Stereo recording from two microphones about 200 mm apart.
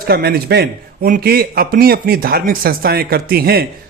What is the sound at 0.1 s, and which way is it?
A man's voice, 50° right (ahead or behind).